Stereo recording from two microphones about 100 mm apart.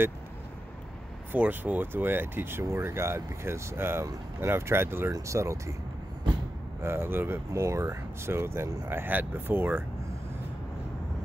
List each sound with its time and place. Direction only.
1.3 s speech: 20° right (ahead or behind)
6.8 s speech: 25° right (ahead or behind)